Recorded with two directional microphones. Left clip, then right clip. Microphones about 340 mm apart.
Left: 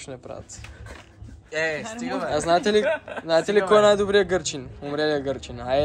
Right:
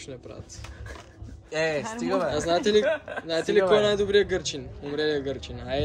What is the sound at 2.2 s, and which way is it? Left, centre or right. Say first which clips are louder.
Speech: left 6 dB; centre.